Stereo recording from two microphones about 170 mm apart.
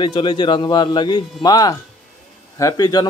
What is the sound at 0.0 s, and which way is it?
A man's voice, 30° left (ahead or behind).